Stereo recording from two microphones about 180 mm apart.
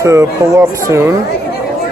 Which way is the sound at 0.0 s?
15° right (ahead or behind).